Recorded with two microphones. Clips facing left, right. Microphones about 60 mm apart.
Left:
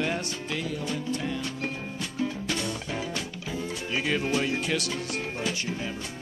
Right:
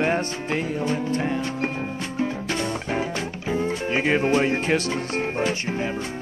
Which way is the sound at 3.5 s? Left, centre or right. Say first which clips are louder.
Right 9 dB; right.